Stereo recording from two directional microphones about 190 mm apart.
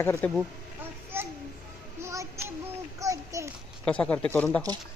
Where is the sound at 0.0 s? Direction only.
10° left (ahead or behind).